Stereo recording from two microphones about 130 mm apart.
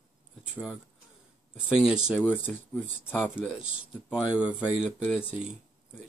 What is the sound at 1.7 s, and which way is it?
Speech, 5° right (ahead or behind).